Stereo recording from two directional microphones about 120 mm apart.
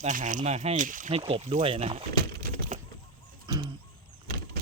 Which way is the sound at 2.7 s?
85° right.